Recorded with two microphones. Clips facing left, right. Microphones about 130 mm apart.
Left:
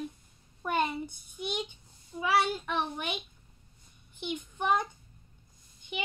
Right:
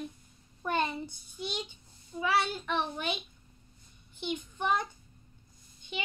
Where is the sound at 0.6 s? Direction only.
10° left (ahead or behind).